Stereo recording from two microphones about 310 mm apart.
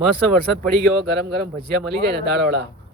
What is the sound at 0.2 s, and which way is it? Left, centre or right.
Speech, right.